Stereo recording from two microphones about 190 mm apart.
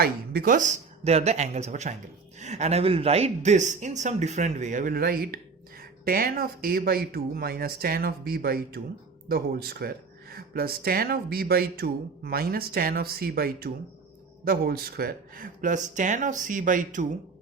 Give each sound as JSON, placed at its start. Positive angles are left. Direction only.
{"t": 0.0, "sound": "speech", "side_deg": -50}